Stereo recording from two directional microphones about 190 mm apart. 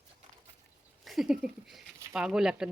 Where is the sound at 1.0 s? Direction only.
Centre (ahead or behind).